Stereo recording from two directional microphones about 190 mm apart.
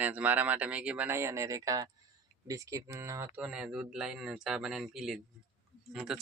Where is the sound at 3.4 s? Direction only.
5° right (ahead or behind).